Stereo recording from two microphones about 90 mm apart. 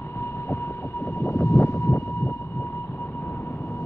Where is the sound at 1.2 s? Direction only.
30° left (ahead or behind).